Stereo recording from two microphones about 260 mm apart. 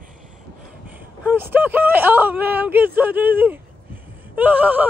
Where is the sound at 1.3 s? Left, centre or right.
Centre.